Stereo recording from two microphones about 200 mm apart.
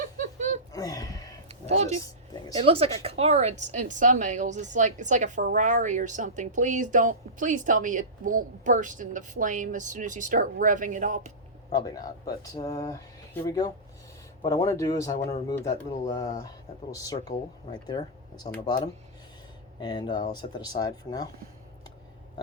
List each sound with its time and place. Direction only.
0.0 s chuckle: 40° right (ahead or behind)
0.7 s a sound: 15° left (ahead or behind)
1.6 s speech: 35° right (ahead or behind)
11.7 s speech: 20° left (ahead or behind)
19.8 s speech: 20° left (ahead or behind)